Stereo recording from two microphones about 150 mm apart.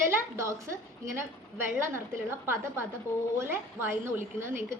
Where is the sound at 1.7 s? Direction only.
15° right (ahead or behind).